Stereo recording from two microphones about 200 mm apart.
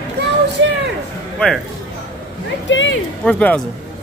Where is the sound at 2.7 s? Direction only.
70° left (ahead or behind).